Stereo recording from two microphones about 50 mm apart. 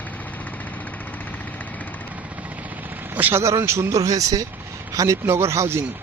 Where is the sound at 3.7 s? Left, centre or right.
Right.